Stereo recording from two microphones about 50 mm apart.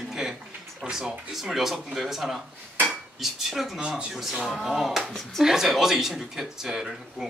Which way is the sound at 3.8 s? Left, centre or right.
Centre.